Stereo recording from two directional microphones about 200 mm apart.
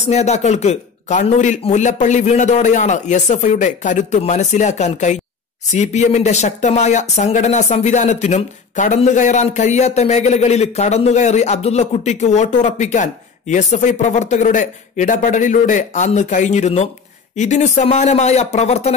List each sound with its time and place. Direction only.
0.1 s speech: 35° left (ahead or behind)